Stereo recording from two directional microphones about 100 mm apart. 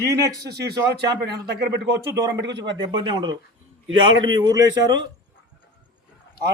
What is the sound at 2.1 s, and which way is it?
Speech, 35° right (ahead or behind).